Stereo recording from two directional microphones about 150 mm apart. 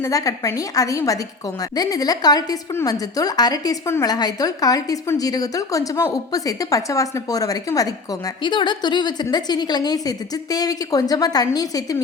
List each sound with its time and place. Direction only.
0.0 s a woman's voice: 20° left (ahead or behind)